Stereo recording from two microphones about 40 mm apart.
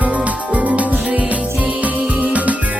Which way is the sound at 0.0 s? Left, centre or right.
Right.